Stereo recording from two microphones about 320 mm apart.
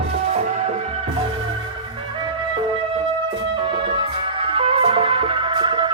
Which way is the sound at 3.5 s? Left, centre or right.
Centre.